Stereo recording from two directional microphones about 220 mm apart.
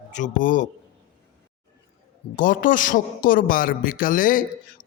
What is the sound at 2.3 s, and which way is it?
A man's voice, 35° left (ahead or behind).